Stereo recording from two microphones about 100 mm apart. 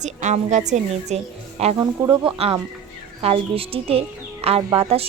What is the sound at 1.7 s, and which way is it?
Speech, 35° right (ahead or behind).